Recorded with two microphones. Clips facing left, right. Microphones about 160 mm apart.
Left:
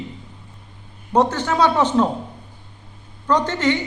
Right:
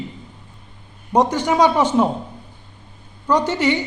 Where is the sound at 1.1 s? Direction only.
15° right (ahead or behind).